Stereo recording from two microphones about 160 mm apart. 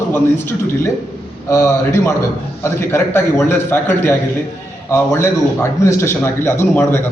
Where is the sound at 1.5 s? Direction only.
20° left (ahead or behind).